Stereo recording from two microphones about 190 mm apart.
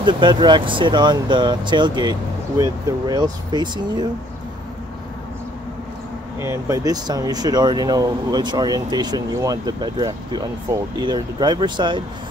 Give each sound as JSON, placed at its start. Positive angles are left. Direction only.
{"t": 0.0, "sound": "speech", "side_deg": -25}
{"t": 6.4, "sound": "speech", "side_deg": -15}